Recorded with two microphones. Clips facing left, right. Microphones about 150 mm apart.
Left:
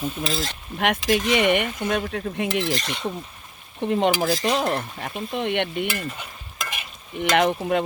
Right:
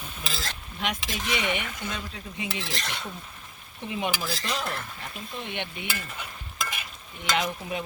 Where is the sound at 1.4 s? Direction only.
60° left (ahead or behind).